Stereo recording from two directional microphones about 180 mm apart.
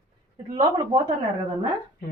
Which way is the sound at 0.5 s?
25° right (ahead or behind).